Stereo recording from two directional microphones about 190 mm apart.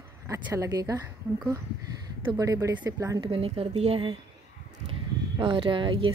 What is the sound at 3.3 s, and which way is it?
Speech, 30° right (ahead or behind).